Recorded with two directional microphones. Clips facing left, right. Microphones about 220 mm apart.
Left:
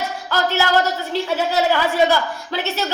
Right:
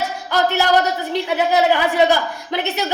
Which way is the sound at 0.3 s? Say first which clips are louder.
Right 2 dB; 15° right (ahead or behind).